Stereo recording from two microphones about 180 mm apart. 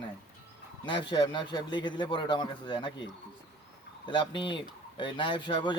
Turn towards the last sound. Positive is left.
turn(degrees=25)  # may be behind; listen again after turning